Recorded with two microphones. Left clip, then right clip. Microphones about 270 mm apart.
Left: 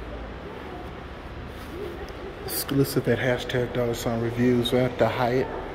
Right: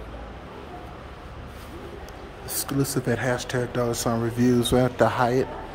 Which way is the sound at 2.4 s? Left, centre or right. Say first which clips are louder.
Left 2 dB; centre.